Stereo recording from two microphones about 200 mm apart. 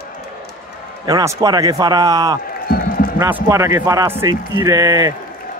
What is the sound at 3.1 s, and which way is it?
A man's voice, 10° right (ahead or behind).